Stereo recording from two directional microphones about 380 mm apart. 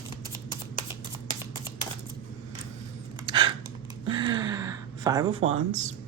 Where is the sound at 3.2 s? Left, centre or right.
Centre.